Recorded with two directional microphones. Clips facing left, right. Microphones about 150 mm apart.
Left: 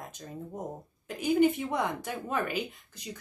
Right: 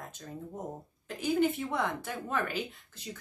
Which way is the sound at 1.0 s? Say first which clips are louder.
Left 4 dB; 15° left (ahead or behind).